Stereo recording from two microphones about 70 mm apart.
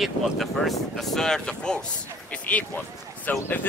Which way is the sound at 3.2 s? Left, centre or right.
Left.